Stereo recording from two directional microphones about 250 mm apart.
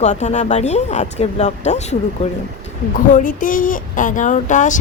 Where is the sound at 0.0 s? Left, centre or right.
Left.